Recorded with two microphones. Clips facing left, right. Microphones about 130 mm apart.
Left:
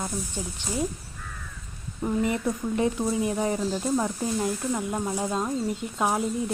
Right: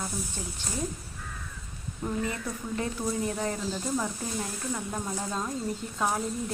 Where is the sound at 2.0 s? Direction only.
20° left (ahead or behind).